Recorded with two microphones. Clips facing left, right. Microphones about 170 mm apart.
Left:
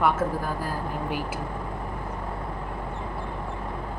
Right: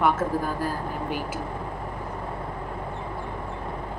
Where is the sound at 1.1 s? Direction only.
45° right (ahead or behind).